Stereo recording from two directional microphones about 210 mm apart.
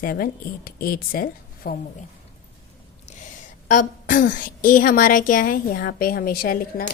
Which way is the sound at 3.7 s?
40° left (ahead or behind).